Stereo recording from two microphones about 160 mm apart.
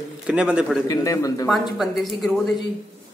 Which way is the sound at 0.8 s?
20° left (ahead or behind).